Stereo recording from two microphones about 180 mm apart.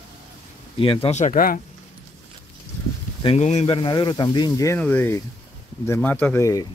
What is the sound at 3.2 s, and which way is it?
Speech, 35° left (ahead or behind).